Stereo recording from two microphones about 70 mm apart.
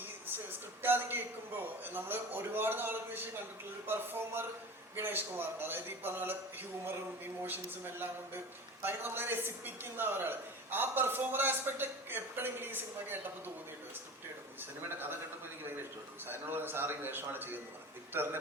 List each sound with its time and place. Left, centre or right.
0.8 s a man's voice: right
14.6 s a man's voice: right
16.2 s a man's voice: right